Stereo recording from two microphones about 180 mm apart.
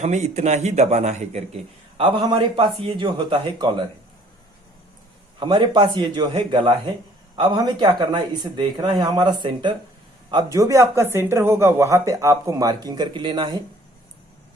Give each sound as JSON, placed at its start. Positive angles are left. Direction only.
{"t": 0.0, "sound": "a man's voice", "side_deg": -40}
{"t": 5.4, "sound": "speech", "side_deg": -25}